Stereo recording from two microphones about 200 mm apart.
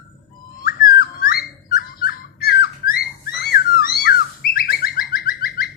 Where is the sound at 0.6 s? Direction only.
50° left (ahead or behind).